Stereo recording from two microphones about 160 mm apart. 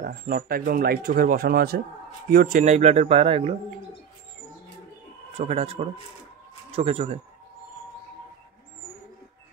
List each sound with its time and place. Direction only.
0.0 s a man's voice: 70° right (ahead or behind)
2.6 s speech: 45° right (ahead or behind)
5.4 s speech: 40° right (ahead or behind)